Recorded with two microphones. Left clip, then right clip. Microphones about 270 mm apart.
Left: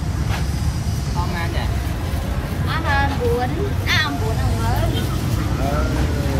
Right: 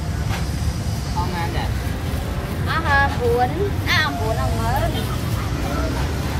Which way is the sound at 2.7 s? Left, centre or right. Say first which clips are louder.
Right 3 dB; right.